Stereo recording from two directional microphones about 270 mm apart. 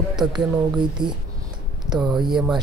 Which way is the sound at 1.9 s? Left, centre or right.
Centre.